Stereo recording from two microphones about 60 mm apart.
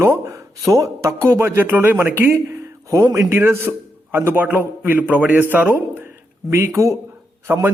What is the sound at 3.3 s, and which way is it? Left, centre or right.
Speech, right.